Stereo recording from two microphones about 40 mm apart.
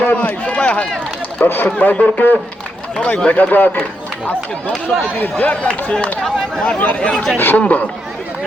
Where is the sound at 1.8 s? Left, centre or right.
Left.